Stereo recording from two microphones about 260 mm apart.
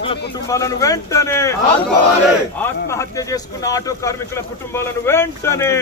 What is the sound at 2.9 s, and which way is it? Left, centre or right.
Speech, centre.